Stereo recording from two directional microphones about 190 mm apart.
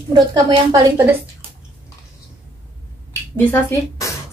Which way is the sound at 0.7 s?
15° right (ahead or behind).